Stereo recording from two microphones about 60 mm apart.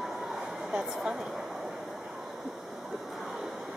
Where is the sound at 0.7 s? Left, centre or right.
Centre.